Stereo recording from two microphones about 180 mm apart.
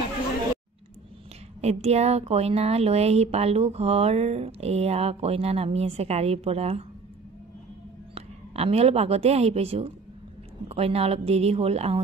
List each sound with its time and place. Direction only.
1.6 s speech: 35° right (ahead or behind)
8.1 s a woman's voice: 35° right (ahead or behind)